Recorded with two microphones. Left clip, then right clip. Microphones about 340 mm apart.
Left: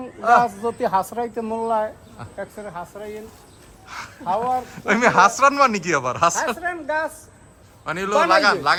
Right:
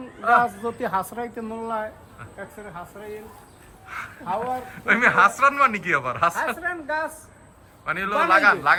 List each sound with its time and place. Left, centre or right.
0.2 s a woman's voice: centre
2.9 s speech: left
4.3 s speech: left
4.7 s speech: centre
6.6 s speech: centre
7.9 s a woman's voice: centre